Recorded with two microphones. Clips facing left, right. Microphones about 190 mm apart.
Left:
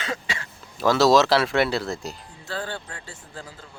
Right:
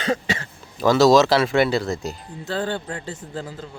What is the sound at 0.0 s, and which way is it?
Speech, 40° right (ahead or behind).